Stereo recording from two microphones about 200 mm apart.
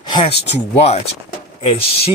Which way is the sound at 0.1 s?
30° left (ahead or behind).